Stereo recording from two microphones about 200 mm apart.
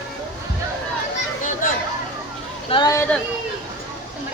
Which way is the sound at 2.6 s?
20° left (ahead or behind).